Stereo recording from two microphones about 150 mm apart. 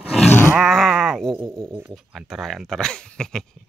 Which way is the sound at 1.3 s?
20° right (ahead or behind).